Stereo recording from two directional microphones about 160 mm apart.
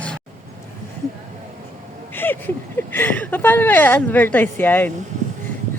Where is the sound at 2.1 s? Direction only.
10° left (ahead or behind).